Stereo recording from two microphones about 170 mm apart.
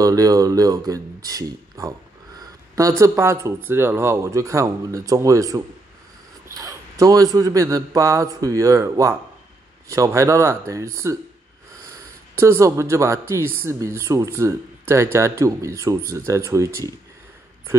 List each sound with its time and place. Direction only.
0.0 s a man's voice: 20° right (ahead or behind)
12.4 s speech: 15° right (ahead or behind)